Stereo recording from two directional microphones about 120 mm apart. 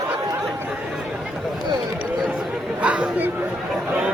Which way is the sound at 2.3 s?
5° right (ahead or behind).